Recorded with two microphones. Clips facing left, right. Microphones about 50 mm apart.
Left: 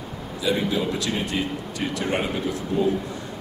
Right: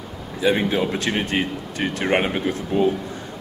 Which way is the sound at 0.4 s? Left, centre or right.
Right.